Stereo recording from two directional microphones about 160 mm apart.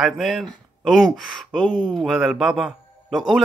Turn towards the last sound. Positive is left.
turn(degrees=0)  # may be behind; listen again after turning